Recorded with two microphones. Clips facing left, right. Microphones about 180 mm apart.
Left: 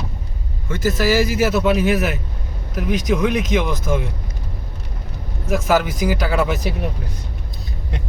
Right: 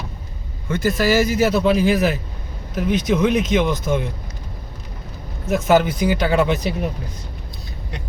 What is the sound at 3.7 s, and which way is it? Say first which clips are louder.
Speech: right 1 dB; centre (ahead or behind).